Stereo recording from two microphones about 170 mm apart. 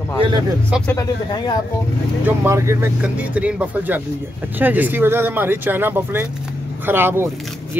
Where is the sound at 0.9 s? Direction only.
25° left (ahead or behind).